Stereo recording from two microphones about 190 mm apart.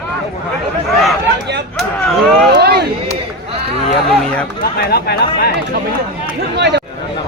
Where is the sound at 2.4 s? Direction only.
55° right (ahead or behind).